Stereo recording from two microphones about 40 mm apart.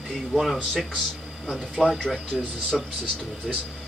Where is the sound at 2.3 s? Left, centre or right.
Centre.